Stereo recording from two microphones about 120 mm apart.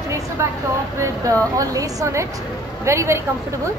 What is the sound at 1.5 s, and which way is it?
Speech, 30° right (ahead or behind).